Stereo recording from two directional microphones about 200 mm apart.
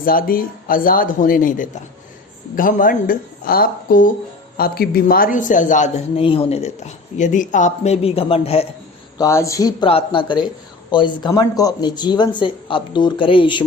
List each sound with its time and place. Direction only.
0.0 s a woman's voice: 45° left (ahead or behind); by 8.6 s 30° left (ahead or behind)
9.1 s speech: 15° left (ahead or behind)